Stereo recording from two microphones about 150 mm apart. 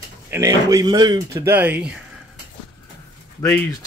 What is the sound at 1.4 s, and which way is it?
Speech, 10° right (ahead or behind).